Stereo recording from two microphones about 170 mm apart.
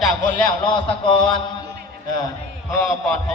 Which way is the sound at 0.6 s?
30° left (ahead or behind).